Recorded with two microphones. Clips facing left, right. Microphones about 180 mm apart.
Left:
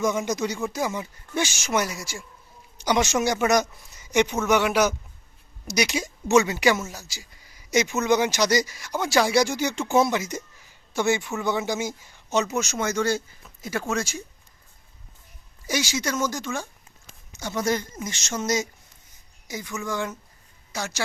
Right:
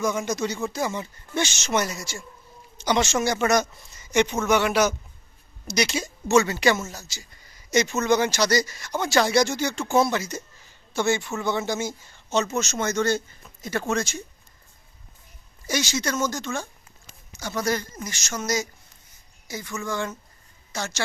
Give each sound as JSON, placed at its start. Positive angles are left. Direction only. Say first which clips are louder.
{"t": 0.3, "sound": "speech", "louder": "even", "side_deg": 15}
{"t": 15.6, "sound": "speech", "louder": "even", "side_deg": 10}